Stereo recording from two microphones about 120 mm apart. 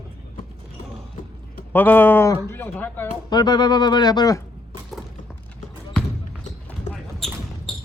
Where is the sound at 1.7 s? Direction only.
15° left (ahead or behind).